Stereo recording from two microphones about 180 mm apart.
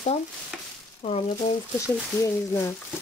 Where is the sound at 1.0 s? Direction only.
30° left (ahead or behind).